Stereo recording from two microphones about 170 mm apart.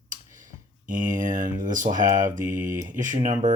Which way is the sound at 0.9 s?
50° right (ahead or behind).